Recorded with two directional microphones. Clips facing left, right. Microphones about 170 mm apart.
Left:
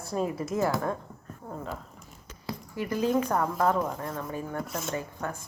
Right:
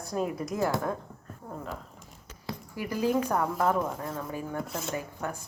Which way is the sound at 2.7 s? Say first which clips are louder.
Left 1 dB; 10° right (ahead or behind).